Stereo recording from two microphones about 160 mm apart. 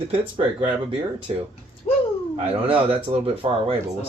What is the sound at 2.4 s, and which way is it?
Speech, 35° right (ahead or behind).